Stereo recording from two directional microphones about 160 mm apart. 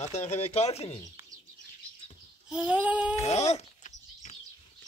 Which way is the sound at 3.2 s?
45° left (ahead or behind).